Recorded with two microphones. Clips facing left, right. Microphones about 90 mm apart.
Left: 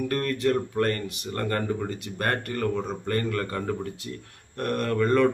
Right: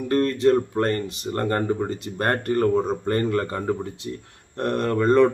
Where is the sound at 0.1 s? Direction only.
25° right (ahead or behind).